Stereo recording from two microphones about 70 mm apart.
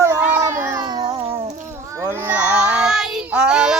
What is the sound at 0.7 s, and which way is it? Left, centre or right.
Cat, right.